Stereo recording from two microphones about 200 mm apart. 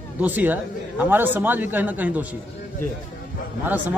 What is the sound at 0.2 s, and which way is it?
Speech, 10° right (ahead or behind).